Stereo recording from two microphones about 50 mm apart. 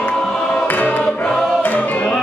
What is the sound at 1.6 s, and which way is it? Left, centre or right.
Music, left.